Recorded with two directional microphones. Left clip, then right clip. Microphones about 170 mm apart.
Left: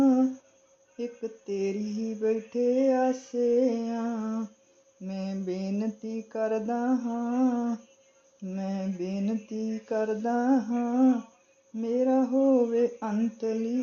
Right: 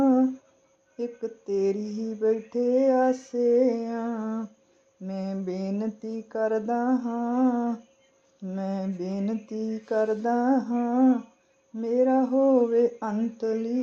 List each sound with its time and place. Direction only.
0.9 s humming: 30° right (ahead or behind)